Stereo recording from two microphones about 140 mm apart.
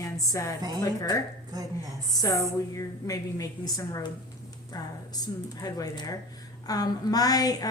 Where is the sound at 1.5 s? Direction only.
25° right (ahead or behind).